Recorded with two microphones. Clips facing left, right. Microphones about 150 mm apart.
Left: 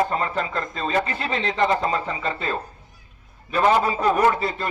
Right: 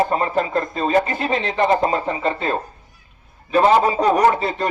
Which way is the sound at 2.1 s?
45° right (ahead or behind).